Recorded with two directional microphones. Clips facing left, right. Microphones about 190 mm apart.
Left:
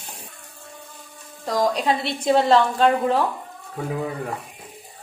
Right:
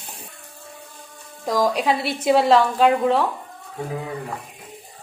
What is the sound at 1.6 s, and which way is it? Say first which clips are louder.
A woman's voice: right 1 dB; 5° right (ahead or behind).